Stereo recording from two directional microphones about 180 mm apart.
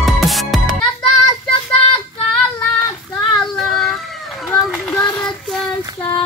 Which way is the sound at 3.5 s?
Centre (ahead or behind).